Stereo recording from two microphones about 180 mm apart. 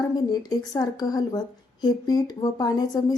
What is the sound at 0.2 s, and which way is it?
A woman's voice, 20° left (ahead or behind).